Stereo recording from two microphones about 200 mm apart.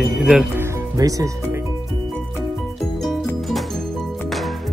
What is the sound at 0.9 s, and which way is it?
Speech, 15° right (ahead or behind).